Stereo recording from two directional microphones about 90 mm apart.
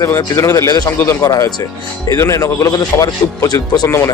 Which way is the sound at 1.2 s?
45° left (ahead or behind).